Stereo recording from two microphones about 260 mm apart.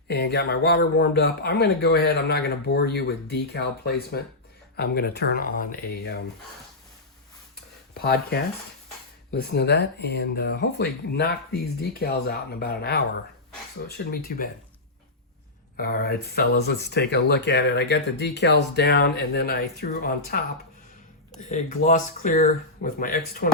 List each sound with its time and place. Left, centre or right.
0.1 s speech: left
7.9 s speech: left
15.8 s speech: left
21.5 s speech: left